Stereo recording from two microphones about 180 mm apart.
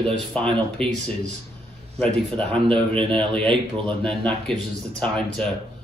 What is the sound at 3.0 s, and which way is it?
Speech, 30° right (ahead or behind).